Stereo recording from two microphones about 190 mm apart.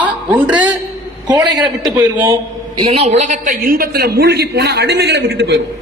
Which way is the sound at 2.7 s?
30° right (ahead or behind).